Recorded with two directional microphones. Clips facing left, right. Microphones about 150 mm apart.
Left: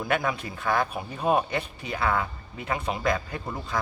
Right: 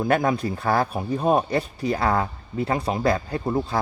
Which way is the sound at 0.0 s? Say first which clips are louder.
Right 6 dB; 40° right (ahead or behind).